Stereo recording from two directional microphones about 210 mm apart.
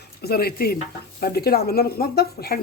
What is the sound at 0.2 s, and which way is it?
Speech, 50° left (ahead or behind).